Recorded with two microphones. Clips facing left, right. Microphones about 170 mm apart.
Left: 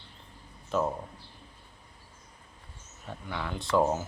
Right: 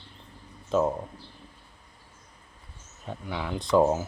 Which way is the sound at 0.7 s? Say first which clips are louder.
Right 5 dB; 20° right (ahead or behind).